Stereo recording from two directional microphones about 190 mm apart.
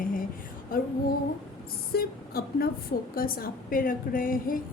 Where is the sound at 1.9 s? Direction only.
55° left (ahead or behind).